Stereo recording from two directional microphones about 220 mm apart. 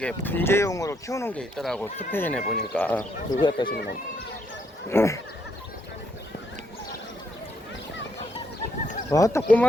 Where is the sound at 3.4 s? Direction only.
20° left (ahead or behind).